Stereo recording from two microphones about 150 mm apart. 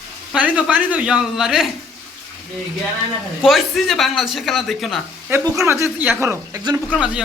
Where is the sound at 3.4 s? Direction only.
Centre (ahead or behind).